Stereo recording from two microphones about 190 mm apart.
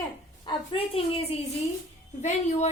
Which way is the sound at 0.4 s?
30° left (ahead or behind).